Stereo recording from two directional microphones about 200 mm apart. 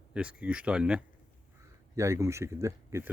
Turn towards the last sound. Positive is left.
turn(degrees=-15)  # may be behind; listen again after turning